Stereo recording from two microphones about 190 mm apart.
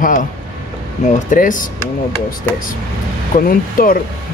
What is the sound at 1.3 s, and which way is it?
Speech, 45° left (ahead or behind).